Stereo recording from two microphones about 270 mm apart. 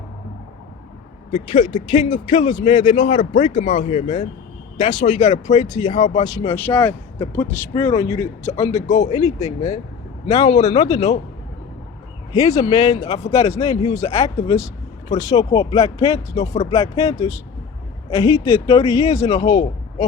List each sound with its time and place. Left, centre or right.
1.3 s speech: left
6.2 s speech: centre
8.9 s speech: left
10.8 s speech: centre
12.5 s speech: centre